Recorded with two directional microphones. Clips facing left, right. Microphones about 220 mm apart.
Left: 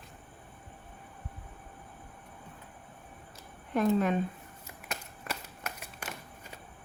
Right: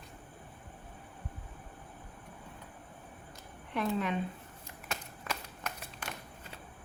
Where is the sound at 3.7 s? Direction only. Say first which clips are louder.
Left 6 dB; 45° left (ahead or behind).